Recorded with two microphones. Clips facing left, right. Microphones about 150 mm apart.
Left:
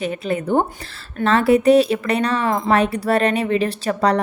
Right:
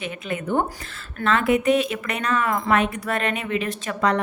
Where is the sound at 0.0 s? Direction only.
35° left (ahead or behind).